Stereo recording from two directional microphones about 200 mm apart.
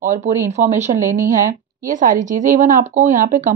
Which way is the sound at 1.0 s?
15° right (ahead or behind).